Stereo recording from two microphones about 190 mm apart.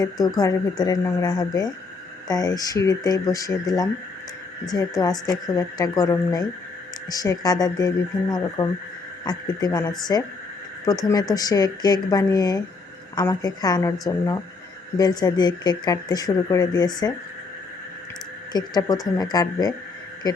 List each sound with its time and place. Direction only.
0.0 s speech: 20° left (ahead or behind)
14.9 s speech: 20° left (ahead or behind)
18.5 s speech: 20° left (ahead or behind)